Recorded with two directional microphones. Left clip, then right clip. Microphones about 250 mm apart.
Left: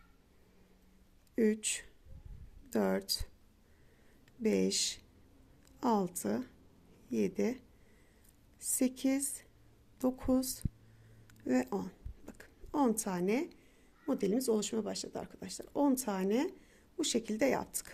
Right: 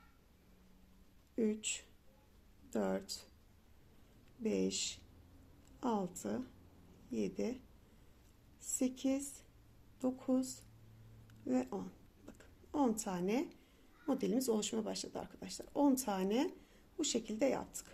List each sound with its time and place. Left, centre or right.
1.4 s speech: left
4.4 s speech: left
8.6 s speech: left